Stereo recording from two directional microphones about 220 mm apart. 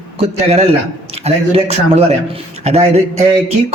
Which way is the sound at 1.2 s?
30° right (ahead or behind).